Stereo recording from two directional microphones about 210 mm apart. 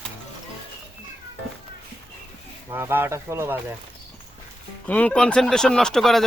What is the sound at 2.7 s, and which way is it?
Speech, 10° right (ahead or behind).